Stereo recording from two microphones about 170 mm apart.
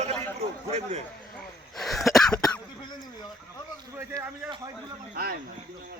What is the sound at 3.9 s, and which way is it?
Speech, 20° right (ahead or behind).